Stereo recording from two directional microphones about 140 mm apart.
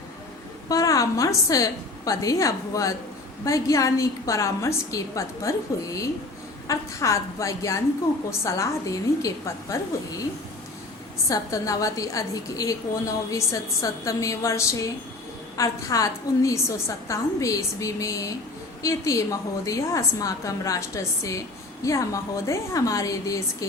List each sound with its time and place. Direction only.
0.7 s a woman's voice: 25° left (ahead or behind)
11.3 s a woman's voice: 25° left (ahead or behind)